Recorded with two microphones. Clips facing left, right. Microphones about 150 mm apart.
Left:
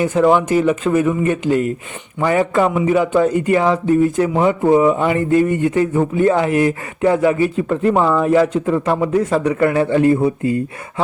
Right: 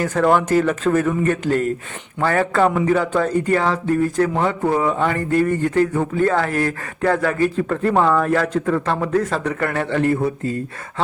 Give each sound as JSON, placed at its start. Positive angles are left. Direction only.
{"t": 0.0, "sound": "a man's voice", "side_deg": 15}